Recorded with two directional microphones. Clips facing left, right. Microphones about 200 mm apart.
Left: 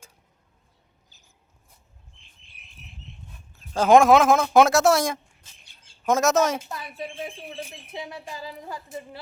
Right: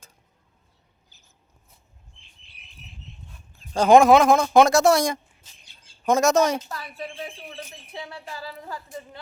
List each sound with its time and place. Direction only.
3.8 s speech: centre (ahead or behind)
6.7 s speech: 20° left (ahead or behind)